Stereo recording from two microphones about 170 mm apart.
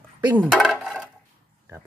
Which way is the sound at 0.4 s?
Centre (ahead or behind).